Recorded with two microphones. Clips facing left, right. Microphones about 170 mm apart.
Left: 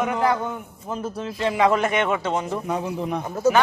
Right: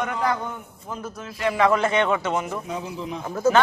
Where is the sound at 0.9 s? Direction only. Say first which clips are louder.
Left 5 dB; 30° left (ahead or behind).